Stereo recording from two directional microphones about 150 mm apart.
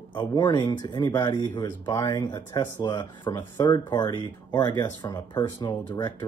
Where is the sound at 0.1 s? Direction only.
30° left (ahead or behind).